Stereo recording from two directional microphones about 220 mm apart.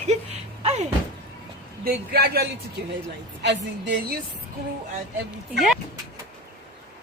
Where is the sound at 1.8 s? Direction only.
45° right (ahead or behind).